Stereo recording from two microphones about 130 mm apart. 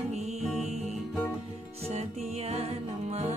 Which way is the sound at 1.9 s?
55° right (ahead or behind).